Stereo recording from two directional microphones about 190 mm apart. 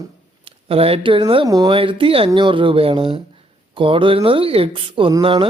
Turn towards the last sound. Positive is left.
turn(degrees=-25)  # may be behind; listen again after turning